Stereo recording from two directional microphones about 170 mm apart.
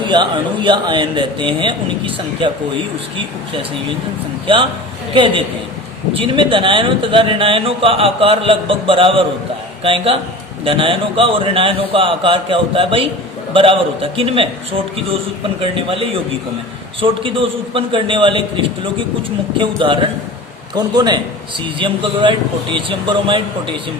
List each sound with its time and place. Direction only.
0.0 s speech: 30° right (ahead or behind)
5.1 s speech: 30° right (ahead or behind)
15.6 s speech: 30° right (ahead or behind)